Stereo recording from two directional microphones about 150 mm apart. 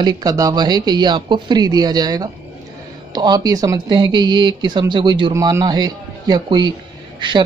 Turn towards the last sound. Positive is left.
turn(degrees=-30)  # may be behind; listen again after turning